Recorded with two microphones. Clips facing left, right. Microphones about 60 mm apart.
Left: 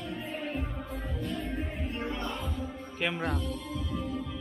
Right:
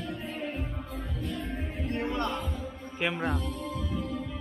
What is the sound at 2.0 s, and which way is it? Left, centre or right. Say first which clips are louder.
Music: right 5 dB; right.